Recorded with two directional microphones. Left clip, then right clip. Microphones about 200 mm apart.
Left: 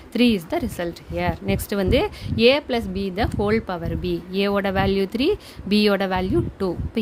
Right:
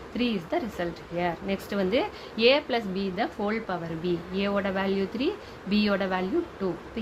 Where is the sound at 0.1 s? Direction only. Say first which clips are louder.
Left 8 dB; 60° left (ahead or behind).